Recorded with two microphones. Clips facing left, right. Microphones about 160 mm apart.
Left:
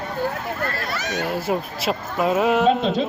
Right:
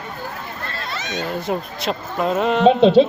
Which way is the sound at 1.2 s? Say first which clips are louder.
Even; 5° left (ahead or behind).